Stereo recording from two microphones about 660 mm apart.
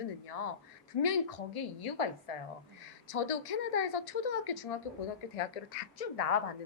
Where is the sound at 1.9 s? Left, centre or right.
Left.